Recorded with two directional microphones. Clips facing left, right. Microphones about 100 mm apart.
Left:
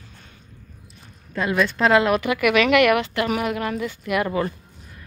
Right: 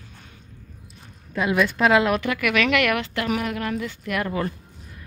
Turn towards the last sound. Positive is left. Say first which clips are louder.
# left 3 dB
turn(degrees=10)  # may be behind; listen again after turning